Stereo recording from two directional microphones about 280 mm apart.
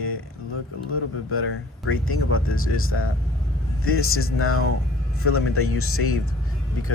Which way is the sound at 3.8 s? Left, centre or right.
Left.